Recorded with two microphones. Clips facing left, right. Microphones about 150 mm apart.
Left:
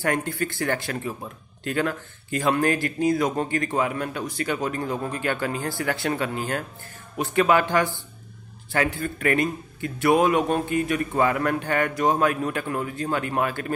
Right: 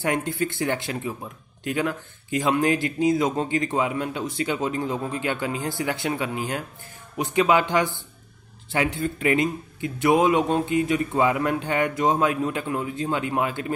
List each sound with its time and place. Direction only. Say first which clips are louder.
0.0 s a man's voice: right 1 dB; 20° right (ahead or behind)